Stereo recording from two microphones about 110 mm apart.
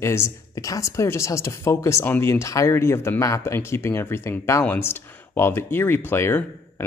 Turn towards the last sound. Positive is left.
turn(degrees=20)  # may be behind; listen again after turning